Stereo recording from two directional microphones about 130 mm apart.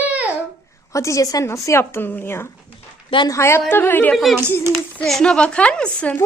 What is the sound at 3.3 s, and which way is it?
Speech, 20° left (ahead or behind).